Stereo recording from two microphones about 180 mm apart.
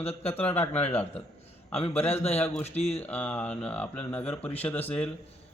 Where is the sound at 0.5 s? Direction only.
35° left (ahead or behind).